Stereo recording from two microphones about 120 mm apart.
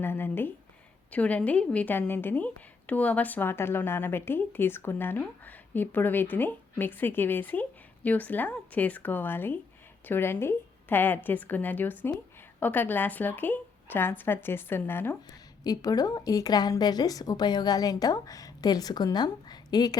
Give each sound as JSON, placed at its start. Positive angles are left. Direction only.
{"t": 0.0, "sound": "a woman's voice", "side_deg": 20}
{"t": 15.6, "sound": "a woman's voice", "side_deg": 30}